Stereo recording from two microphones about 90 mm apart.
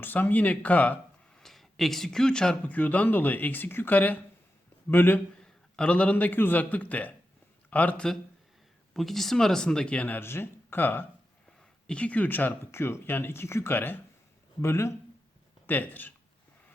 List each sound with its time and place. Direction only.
0.0 s speech: 20° left (ahead or behind)
1.4 s speech: 5° left (ahead or behind); by 5.2 s 25° left (ahead or behind)
5.4 s a man's voice: 10° left (ahead or behind)
8.9 s speech: centre (ahead or behind); by 16.1 s 20° left (ahead or behind)